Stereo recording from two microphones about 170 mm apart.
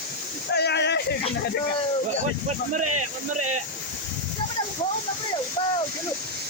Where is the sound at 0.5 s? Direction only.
75° left (ahead or behind).